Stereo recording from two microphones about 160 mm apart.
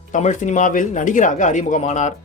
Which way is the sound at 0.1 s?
50° left (ahead or behind).